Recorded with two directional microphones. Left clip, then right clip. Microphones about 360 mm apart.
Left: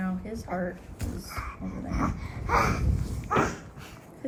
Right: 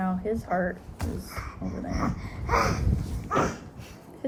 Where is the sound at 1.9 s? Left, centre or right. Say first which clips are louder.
Left 1 dB; centre.